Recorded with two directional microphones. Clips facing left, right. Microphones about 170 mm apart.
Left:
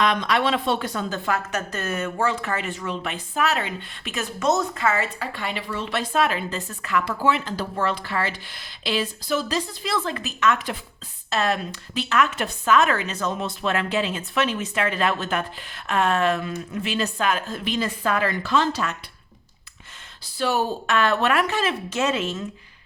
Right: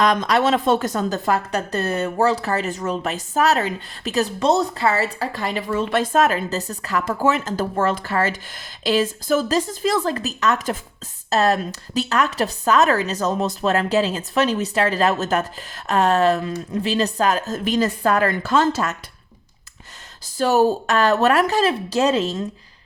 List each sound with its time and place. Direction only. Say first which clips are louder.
0.0 s a woman's voice: right 4 dB; 40° right (ahead or behind)
20.2 s a woman's voice: right 7 dB; 40° right (ahead or behind)